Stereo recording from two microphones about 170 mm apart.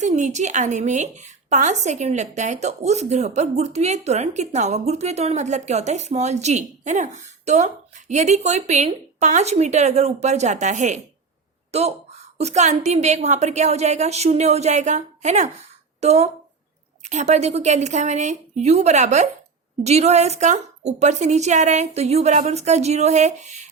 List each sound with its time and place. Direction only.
0.0 s a woman's voice: 45° right (ahead or behind)